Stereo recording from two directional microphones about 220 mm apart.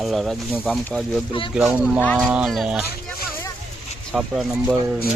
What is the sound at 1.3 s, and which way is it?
Speech, 20° left (ahead or behind).